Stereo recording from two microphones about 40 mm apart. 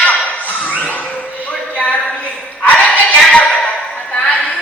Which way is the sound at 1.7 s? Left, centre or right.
Left.